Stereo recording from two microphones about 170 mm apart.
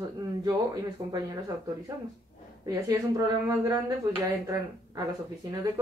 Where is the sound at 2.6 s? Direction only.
25° right (ahead or behind).